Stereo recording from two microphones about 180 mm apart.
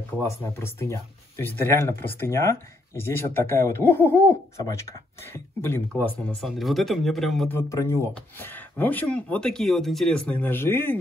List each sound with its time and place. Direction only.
0.2 s speech: 15° left (ahead or behind)
7.5 s speech: 15° left (ahead or behind)